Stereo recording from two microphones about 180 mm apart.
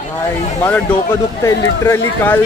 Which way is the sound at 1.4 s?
15° left (ahead or behind).